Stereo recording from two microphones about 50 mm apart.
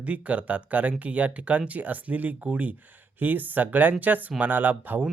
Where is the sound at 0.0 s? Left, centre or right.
Right.